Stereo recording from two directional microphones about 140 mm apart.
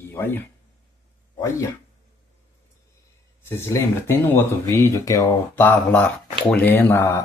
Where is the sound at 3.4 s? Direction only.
20° left (ahead or behind).